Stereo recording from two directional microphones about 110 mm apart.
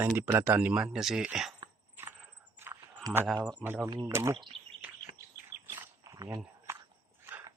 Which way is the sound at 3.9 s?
40° right (ahead or behind).